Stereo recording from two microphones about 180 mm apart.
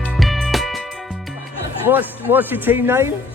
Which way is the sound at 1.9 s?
10° right (ahead or behind).